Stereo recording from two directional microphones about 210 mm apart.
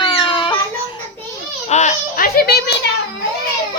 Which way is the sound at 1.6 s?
35° left (ahead or behind).